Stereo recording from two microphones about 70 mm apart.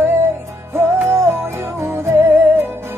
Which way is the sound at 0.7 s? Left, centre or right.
Right.